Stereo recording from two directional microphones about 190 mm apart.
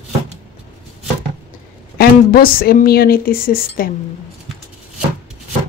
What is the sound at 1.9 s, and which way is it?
Speech, 50° left (ahead or behind).